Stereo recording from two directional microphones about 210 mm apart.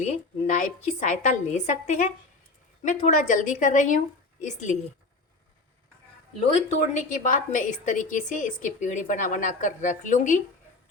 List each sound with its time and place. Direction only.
0.0 s a woman's voice: 35° left (ahead or behind)
6.4 s a woman's voice: 30° left (ahead or behind)